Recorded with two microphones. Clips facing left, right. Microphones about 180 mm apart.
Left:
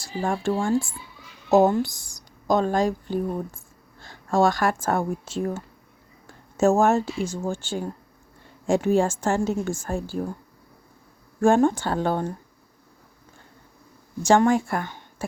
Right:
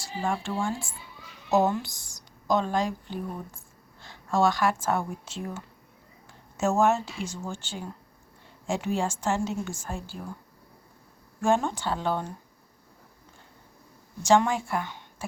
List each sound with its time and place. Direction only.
0.0 s a woman's voice: 45° left (ahead or behind)
1.8 s speech: 10° left (ahead or behind)
2.5 s a woman's voice: 45° left (ahead or behind)
8.6 s a woman's voice: 45° left (ahead or behind)
11.3 s a woman's voice: 50° left (ahead or behind)
14.2 s a woman's voice: 50° left (ahead or behind)